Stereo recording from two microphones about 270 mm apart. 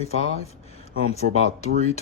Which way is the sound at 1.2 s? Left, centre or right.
Right.